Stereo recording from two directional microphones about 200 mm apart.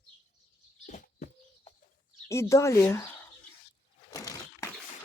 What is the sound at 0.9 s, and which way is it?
Chicken, 40° left (ahead or behind).